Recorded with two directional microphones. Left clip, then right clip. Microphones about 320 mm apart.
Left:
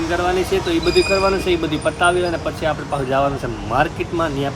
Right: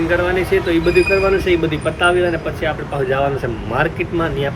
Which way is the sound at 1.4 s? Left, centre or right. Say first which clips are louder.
Right 2 dB; centre.